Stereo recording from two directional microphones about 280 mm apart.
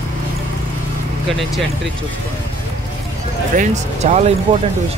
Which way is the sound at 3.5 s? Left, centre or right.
Right.